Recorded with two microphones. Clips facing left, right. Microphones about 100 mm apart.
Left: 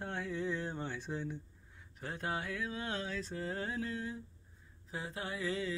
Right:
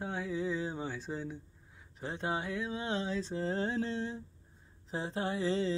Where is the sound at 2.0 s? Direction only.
20° right (ahead or behind).